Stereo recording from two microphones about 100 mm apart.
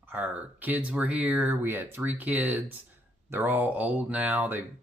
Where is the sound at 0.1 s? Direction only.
15° right (ahead or behind).